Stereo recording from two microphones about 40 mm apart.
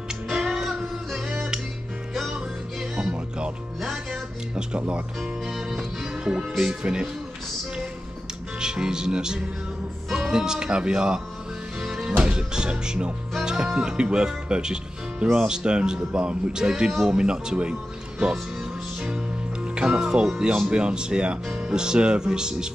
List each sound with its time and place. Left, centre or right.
0.3 s music: centre
2.3 s music: right
5.2 s music: centre
6.7 s speech: right
8.5 s music: centre
10.1 s speech: centre
11.8 s music: centre
12.2 s speech: right
18.9 s music: right
20.4 s speech: right